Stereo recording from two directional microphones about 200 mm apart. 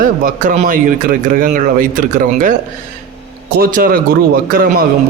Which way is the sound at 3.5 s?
45° right (ahead or behind).